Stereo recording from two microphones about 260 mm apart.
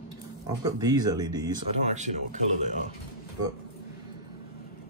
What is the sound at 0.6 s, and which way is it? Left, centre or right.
Speech, centre.